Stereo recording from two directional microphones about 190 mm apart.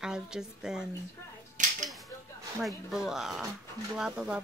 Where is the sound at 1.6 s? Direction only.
40° right (ahead or behind).